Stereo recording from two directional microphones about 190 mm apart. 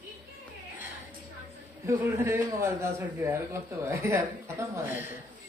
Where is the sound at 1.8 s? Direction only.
15° right (ahead or behind).